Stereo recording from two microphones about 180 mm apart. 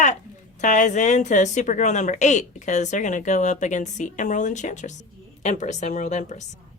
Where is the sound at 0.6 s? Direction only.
45° left (ahead or behind).